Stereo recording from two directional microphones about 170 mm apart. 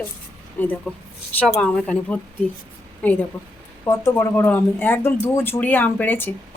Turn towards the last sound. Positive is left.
turn(degrees=10)  # may be behind; listen again after turning